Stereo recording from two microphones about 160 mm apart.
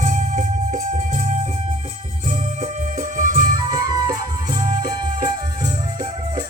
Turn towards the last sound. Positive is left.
turn(degrees=-25)  # may be behind; listen again after turning